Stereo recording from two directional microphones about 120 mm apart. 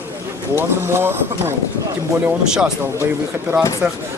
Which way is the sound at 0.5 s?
20° right (ahead or behind).